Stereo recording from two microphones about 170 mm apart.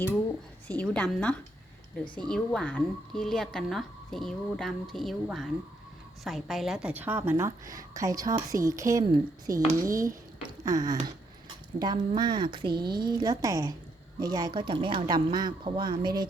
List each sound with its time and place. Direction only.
0.7 s a woman's voice: 5° left (ahead or behind); by 10.1 s 20° right (ahead or behind)
10.6 s a sound: 20° right (ahead or behind)
11.8 s speech: 25° right (ahead or behind)